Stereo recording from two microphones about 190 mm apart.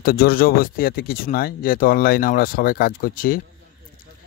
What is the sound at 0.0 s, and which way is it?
Speech, 50° left (ahead or behind).